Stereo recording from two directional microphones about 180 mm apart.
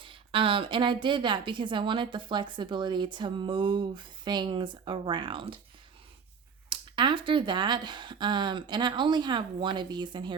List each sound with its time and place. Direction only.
0.0 s a woman's voice: 30° right (ahead or behind)
6.7 s a woman's voice: 25° right (ahead or behind)